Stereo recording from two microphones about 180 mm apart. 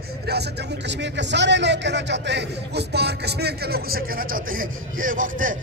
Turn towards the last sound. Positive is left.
turn(degrees=-45)  # may be behind; listen again after turning